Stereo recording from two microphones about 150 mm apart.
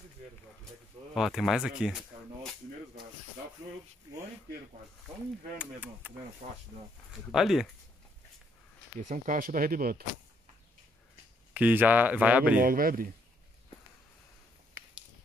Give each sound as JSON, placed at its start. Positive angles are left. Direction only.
{"t": 1.1, "sound": "speech", "side_deg": 0}
{"t": 5.6, "sound": "speech", "side_deg": -10}
{"t": 6.4, "sound": "speech", "side_deg": -45}
{"t": 7.2, "sound": "speech", "side_deg": 0}
{"t": 9.0, "sound": "speech", "side_deg": -60}
{"t": 11.5, "sound": "speech", "side_deg": -10}
{"t": 12.5, "sound": "speech", "side_deg": -70}